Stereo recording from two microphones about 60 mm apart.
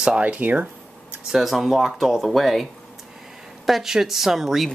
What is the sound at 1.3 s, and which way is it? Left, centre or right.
Speech, centre.